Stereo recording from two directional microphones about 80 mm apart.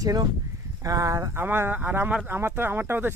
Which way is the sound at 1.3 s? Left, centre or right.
Right.